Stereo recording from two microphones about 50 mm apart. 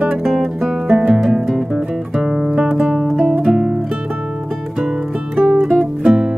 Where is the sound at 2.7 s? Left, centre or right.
Centre.